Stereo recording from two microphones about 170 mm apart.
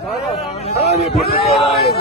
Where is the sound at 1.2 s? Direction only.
65° left (ahead or behind).